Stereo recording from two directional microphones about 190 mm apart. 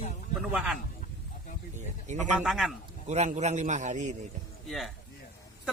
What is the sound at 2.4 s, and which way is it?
Speech, centre (ahead or behind).